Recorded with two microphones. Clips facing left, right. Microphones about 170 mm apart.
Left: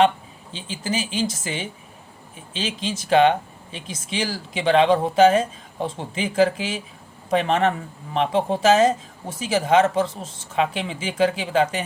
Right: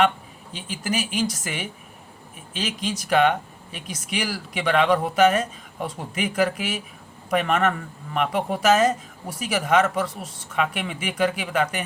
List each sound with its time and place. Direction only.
0.5 s speech: 25° left (ahead or behind)